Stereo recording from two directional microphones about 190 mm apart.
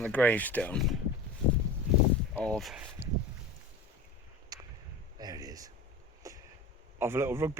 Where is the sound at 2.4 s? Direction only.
5° left (ahead or behind).